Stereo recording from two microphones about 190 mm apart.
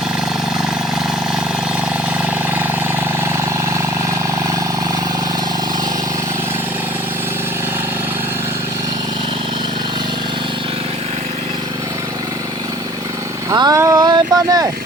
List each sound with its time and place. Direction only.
13.5 s vehicle: 20° right (ahead or behind)